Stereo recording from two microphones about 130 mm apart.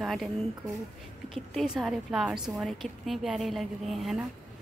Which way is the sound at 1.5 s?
5° right (ahead or behind).